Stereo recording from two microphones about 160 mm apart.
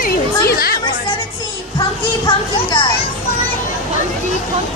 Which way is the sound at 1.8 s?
30° left (ahead or behind).